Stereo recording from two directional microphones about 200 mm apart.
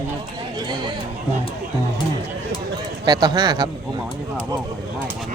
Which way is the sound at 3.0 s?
20° right (ahead or behind).